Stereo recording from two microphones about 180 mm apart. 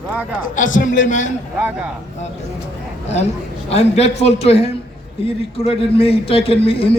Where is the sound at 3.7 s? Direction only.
35° left (ahead or behind).